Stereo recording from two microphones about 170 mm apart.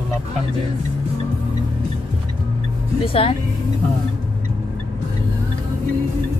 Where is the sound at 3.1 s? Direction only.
35° left (ahead or behind).